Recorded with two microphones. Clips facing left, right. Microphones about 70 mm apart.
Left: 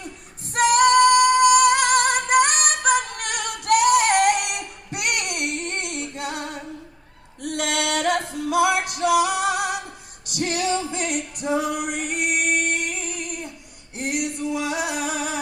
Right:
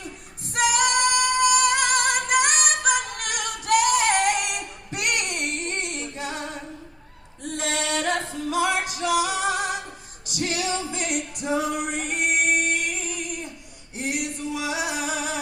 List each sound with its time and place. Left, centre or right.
0.5 s female singing: left
2.8 s music: left
5.0 s child singing: left
5.5 s music: left
6.1 s female singing: left
7.5 s music: left
11.3 s female singing: left
11.9 s music: right
12.3 s music: left